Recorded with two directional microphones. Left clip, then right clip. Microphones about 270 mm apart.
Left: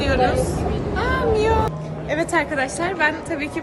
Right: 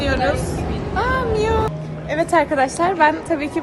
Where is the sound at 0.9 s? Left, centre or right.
Centre.